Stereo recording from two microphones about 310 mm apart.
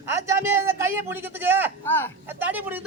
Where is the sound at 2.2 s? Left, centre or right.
Centre.